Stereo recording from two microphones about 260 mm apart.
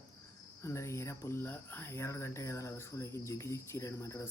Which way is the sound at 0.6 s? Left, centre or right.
Centre.